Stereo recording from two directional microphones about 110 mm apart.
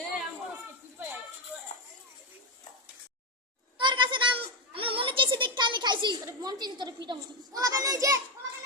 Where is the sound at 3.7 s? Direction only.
45° right (ahead or behind).